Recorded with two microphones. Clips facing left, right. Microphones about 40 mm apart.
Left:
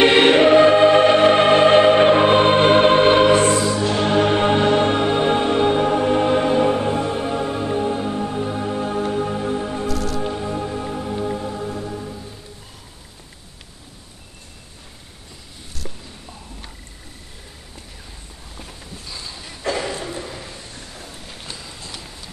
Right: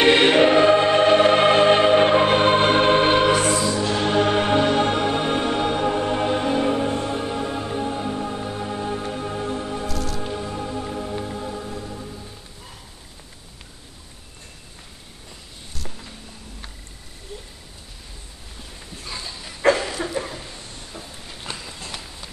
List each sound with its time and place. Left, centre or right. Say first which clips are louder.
0.0 s choir: left 2 dB; centre
3.3 s music: left 4 dB; left
3.6 s music: left 2 dB; centre
19.6 s a sound: right 6 dB; right
21.5 s run: right 3 dB; right